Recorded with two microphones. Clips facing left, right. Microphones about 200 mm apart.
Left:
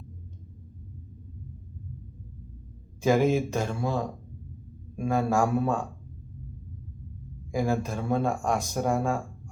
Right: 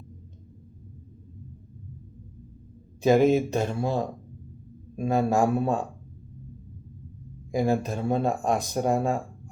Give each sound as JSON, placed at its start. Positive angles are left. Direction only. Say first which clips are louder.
{"t": 3.0, "sound": "speech", "louder": "right 3 dB", "side_deg": -20}
{"t": 4.9, "sound": "speech", "louder": "right 2 dB", "side_deg": -20}
{"t": 7.5, "sound": "speech", "louder": "right 3 dB", "side_deg": -20}